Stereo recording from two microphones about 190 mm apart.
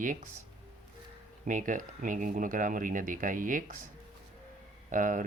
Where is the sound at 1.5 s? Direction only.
45° right (ahead or behind).